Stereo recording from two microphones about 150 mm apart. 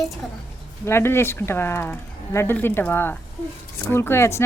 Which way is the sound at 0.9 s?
15° left (ahead or behind).